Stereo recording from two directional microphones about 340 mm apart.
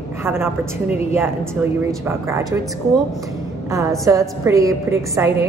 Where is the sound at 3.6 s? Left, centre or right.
Centre.